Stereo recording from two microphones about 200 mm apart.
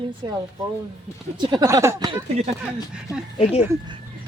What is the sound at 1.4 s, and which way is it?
Speech, 20° right (ahead or behind).